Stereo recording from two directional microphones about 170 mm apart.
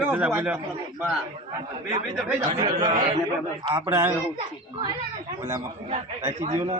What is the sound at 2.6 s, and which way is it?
Speech, 30° right (ahead or behind).